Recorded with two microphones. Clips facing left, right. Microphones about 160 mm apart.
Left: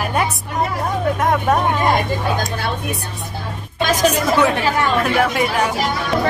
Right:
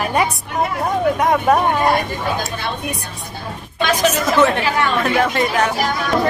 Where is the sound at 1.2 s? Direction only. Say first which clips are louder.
Right 1 dB; centre (ahead or behind).